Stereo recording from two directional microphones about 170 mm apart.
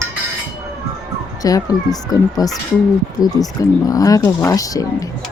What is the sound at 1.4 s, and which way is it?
Speech, 20° left (ahead or behind).